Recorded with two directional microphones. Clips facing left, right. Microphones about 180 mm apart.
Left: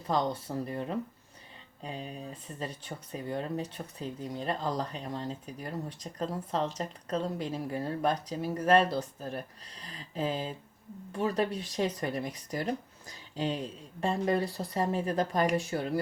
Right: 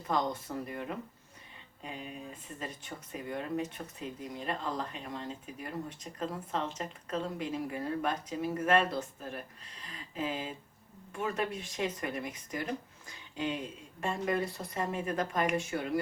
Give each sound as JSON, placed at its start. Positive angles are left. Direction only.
{"t": 0.1, "sound": "speech", "side_deg": 30}